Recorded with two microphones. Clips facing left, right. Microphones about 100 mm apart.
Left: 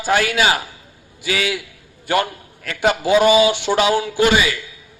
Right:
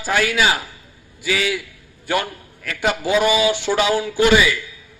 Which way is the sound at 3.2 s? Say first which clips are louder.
Left 5 dB; 70° left (ahead or behind).